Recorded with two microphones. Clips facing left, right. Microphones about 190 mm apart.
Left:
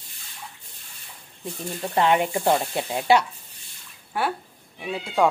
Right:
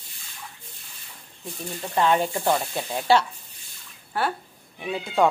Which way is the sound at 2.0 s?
15° left (ahead or behind).